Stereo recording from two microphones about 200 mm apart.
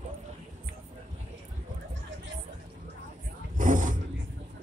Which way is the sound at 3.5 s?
40° right (ahead or behind).